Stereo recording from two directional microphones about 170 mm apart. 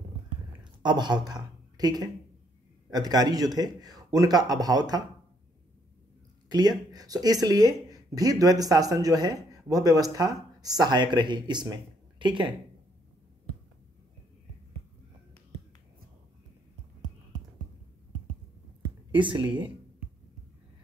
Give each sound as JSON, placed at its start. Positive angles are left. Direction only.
{"t": 0.8, "sound": "speech", "side_deg": -25}
{"t": 6.5, "sound": "speech", "side_deg": -25}
{"t": 19.1, "sound": "speech", "side_deg": -30}